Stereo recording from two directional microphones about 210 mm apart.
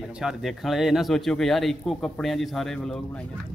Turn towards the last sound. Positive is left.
turn(degrees=0)  # may be behind; listen again after turning